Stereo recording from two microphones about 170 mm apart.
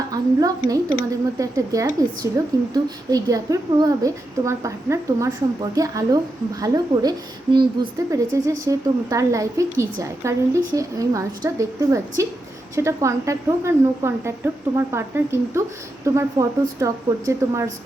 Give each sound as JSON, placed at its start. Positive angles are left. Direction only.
{"t": 0.1, "sound": "a woman's voice", "side_deg": -20}